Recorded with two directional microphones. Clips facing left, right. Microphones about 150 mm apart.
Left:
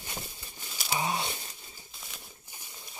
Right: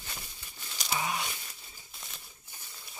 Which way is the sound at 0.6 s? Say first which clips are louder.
Left 1 dB; 5° left (ahead or behind).